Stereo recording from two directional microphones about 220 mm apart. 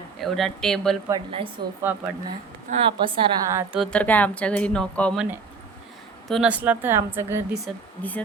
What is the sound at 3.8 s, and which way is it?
Speech, 5° left (ahead or behind).